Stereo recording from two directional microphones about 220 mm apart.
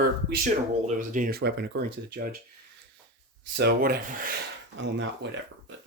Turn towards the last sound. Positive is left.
turn(degrees=-55)  # may be behind; listen again after turning